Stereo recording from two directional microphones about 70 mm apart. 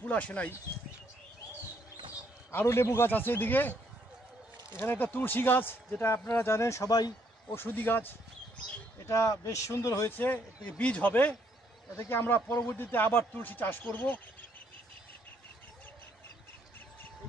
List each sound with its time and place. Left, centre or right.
0.0 s speech: centre
2.5 s speech: left
4.7 s speech: left
6.9 s speech: left
7.5 s speech: left
9.0 s speech: left
10.1 s speech: left
12.0 s speech: left